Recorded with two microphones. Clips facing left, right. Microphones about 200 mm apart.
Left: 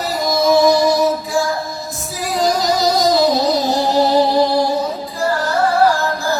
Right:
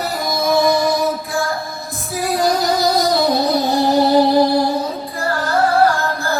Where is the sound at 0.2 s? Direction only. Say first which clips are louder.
Left 4 dB; 55° right (ahead or behind).